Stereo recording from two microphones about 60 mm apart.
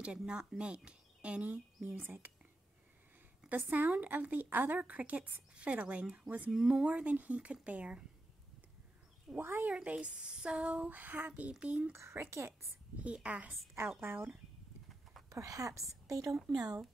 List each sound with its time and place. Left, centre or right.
0.0 s a woman's voice: centre; by 2.3 s right
3.4 s a woman's voice: right
6.5 s a woman's voice: centre
9.4 s speech: right
9.7 s a woman's voice: centre
11.9 s speech: right
13.0 s a woman's voice: right
15.2 s speech: right
16.1 s a woman's voice: right